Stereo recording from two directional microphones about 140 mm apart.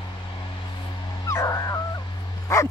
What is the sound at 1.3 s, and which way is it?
Dog, 25° left (ahead or behind).